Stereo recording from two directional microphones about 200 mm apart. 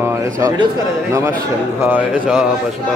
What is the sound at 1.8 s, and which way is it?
Speech, 10° right (ahead or behind).